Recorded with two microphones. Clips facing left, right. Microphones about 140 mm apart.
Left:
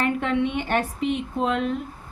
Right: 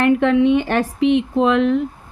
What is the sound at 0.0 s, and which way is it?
Speech, 90° right.